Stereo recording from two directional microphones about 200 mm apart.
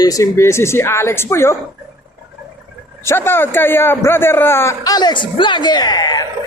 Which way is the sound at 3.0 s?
10° left (ahead or behind).